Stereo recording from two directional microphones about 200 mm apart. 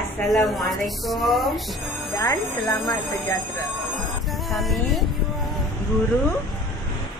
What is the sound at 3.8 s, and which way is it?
Music, centre (ahead or behind).